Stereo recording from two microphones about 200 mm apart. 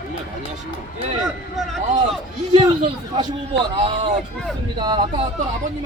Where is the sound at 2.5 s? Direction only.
25° right (ahead or behind).